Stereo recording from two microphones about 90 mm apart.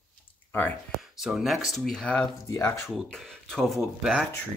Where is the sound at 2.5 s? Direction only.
35° left (ahead or behind).